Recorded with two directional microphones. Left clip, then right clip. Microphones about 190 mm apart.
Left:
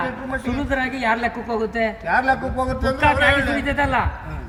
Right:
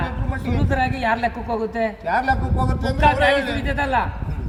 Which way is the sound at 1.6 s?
10° right (ahead or behind).